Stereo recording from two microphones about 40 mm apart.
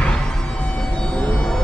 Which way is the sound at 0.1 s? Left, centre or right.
Left.